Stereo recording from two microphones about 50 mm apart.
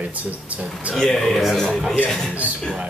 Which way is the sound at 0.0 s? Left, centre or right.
Right.